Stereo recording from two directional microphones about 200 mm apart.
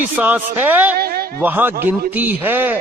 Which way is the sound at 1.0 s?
50° right (ahead or behind).